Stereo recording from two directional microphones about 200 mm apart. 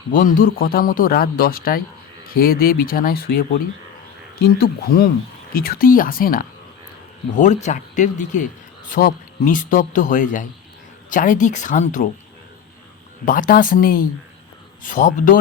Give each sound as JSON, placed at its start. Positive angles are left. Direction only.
{"t": 0.1, "sound": "a man's voice", "side_deg": 45}
{"t": 13.2, "sound": "a man's voice", "side_deg": 45}